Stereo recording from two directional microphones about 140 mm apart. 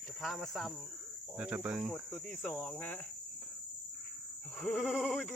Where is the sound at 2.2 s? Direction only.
15° left (ahead or behind).